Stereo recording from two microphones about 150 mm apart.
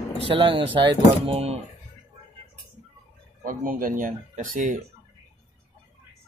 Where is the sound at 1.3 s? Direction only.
45° right (ahead or behind).